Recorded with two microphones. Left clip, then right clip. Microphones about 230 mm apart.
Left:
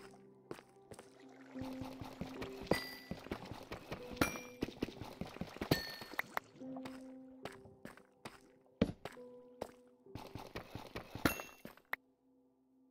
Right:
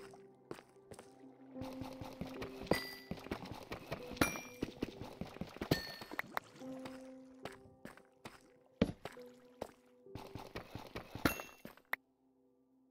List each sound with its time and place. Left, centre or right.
0.0 s walk: centre
1.2 s music: left
1.6 s music: centre
4.6 s clip-clop: centre